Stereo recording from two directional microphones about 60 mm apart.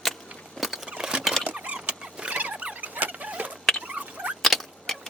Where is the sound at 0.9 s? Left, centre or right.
Centre.